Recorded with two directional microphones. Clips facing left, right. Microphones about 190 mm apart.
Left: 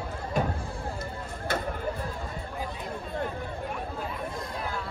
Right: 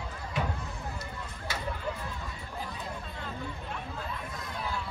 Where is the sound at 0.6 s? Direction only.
30° left (ahead or behind).